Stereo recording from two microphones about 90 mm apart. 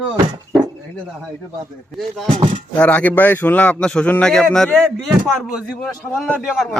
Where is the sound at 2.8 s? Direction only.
15° left (ahead or behind).